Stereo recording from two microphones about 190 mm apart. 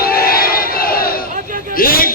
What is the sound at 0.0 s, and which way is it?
Battle cry, 50° left (ahead or behind).